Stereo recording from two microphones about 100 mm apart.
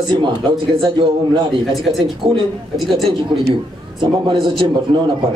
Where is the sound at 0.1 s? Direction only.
55° right (ahead or behind).